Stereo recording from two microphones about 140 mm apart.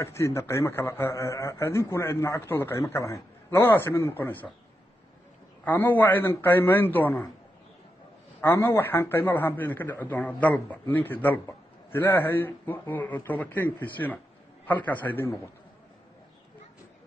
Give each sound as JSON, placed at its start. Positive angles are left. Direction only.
{"t": 0.0, "sound": "a man's voice", "side_deg": 20}
{"t": 5.7, "sound": "a man's voice", "side_deg": 15}
{"t": 8.4, "sound": "a man's voice", "side_deg": 15}